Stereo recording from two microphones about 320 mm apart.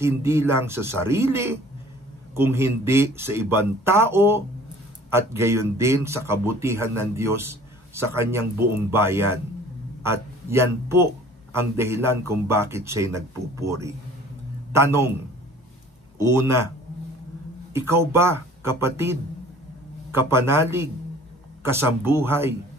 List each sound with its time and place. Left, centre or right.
0.0 s a man's voice: centre
16.2 s speech: centre
17.7 s speech: centre